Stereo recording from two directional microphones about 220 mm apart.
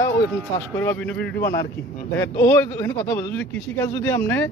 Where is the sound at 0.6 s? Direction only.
10° left (ahead or behind).